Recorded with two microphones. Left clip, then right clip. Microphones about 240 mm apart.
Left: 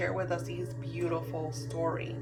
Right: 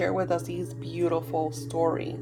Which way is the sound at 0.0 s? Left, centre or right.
Right.